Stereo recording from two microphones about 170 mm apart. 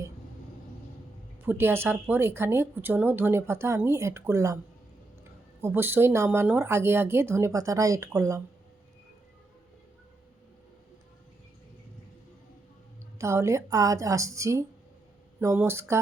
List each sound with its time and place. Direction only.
1.5 s speech: 15° right (ahead or behind)
5.6 s speech: 10° right (ahead or behind)
13.1 s speech: 15° right (ahead or behind)